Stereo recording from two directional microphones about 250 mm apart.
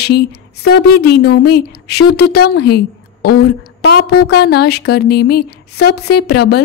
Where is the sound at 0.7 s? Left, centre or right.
Left.